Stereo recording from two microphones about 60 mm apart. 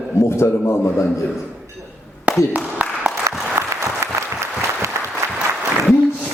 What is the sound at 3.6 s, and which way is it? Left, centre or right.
Applause, right.